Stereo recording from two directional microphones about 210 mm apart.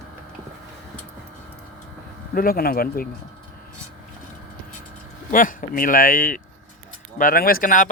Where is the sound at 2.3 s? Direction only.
45° left (ahead or behind).